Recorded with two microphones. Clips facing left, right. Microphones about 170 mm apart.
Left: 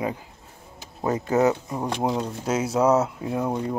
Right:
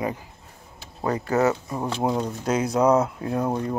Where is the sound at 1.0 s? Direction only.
20° left (ahead or behind).